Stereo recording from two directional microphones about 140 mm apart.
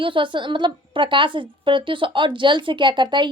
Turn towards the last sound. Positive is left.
turn(degrees=-35)  # may be behind; listen again after turning